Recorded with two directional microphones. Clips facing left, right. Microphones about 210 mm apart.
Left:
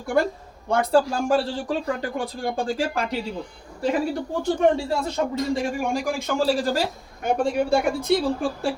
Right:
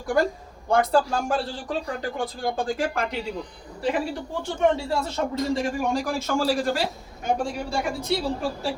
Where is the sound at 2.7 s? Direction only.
30° left (ahead or behind).